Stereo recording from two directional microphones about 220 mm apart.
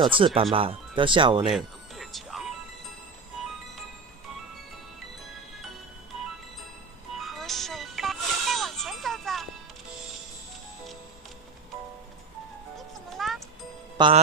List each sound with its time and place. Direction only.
0.0 s speech: 25° right (ahead or behind)
1.5 s music: centre (ahead or behind)
7.2 s music: centre (ahead or behind)
12.7 s music: centre (ahead or behind)
13.9 s music: 20° right (ahead or behind)